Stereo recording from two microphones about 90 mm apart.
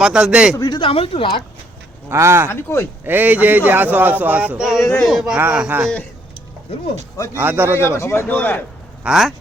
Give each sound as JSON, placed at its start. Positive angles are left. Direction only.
{"t": 0.0, "sound": "a man's voice", "side_deg": -10}
{"t": 0.5, "sound": "speech", "side_deg": 45}
{"t": 0.8, "sound": "speech", "side_deg": 90}
{"t": 2.0, "sound": "speech", "side_deg": -30}
{"t": 2.5, "sound": "speech", "side_deg": 30}
{"t": 3.0, "sound": "speech", "side_deg": -20}
{"t": 5.4, "sound": "speech", "side_deg": -20}
{"t": 7.3, "sound": "speech", "side_deg": -25}
{"t": 7.8, "sound": "speech", "side_deg": 30}
{"t": 9.0, "sound": "speech", "side_deg": 0}